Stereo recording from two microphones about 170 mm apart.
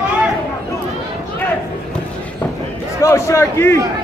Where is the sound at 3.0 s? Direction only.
15° left (ahead or behind).